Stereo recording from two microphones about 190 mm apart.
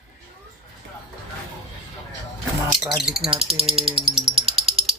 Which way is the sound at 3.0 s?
Centre (ahead or behind).